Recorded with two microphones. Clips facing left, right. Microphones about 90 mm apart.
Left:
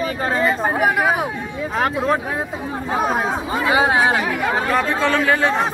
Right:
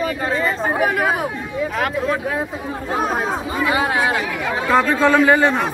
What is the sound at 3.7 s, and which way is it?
Speech, 25° left (ahead or behind).